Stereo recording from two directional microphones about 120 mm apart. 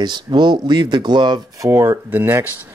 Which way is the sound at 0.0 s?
40° right (ahead or behind).